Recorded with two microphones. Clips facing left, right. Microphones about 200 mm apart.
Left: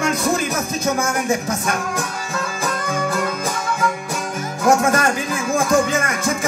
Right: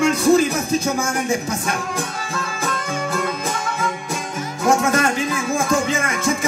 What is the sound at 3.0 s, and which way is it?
Music, 50° left (ahead or behind).